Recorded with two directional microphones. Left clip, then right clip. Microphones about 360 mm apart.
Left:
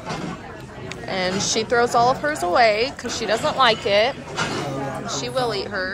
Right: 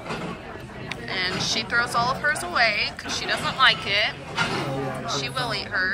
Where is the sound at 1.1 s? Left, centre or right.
Centre.